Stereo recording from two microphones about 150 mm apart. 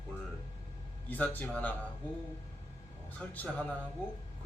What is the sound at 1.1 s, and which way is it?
Speech, 10° left (ahead or behind).